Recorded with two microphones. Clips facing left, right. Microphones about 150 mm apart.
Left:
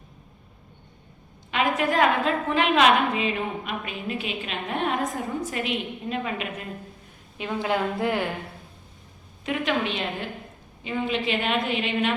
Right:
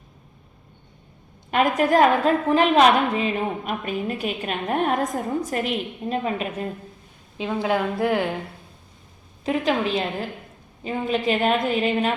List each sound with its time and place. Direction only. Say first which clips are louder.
1.5 s a woman's voice: right 5 dB; 45° right (ahead or behind)
7.3 s a woman's voice: right 3 dB; 15° right (ahead or behind)
9.4 s a woman's voice: right 4 dB; 35° right (ahead or behind)